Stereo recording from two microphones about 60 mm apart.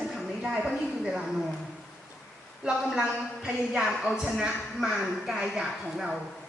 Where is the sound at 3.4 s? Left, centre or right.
Centre.